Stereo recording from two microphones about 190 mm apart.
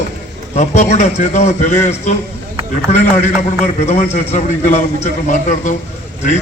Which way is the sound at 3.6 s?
35° left (ahead or behind).